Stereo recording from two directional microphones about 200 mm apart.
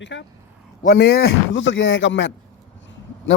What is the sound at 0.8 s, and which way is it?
A man's voice, 50° left (ahead or behind).